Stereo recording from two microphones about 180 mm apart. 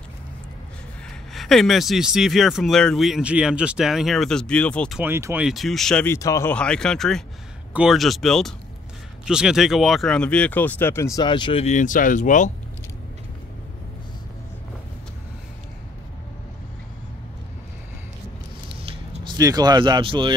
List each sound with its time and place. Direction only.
1.3 s speech: centre (ahead or behind)
5.0 s speech: 10° right (ahead or behind); by 6.1 s 5° left (ahead or behind)
6.1 s speech: 15° left (ahead or behind)
6.5 s speech: 5° left (ahead or behind); by 11.6 s 25° left (ahead or behind)
11.6 s speech: 45° left (ahead or behind)
18.8 s a sound: 30° right (ahead or behind)